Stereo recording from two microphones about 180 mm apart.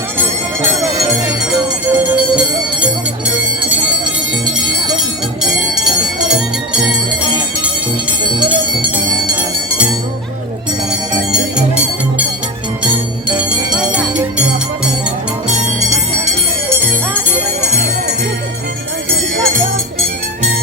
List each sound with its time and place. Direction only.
1.9 s music: 10° right (ahead or behind)
11.3 s music: 5° right (ahead or behind)